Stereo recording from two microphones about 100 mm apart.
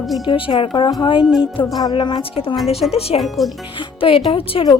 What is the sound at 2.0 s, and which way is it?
Speech, 55° left (ahead or behind).